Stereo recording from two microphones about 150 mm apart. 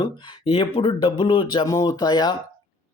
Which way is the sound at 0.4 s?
35° left (ahead or behind).